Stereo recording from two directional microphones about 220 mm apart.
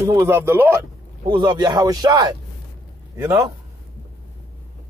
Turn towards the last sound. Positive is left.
turn(degrees=-10)  # may be behind; listen again after turning